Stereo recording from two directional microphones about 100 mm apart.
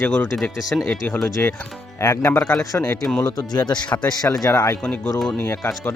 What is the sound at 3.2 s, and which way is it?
Speech, 40° left (ahead or behind).